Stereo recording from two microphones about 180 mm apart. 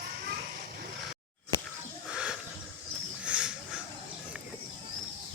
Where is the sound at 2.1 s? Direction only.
5° right (ahead or behind).